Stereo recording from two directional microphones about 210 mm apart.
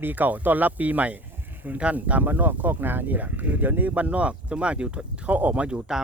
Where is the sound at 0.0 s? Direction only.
10° right (ahead or behind).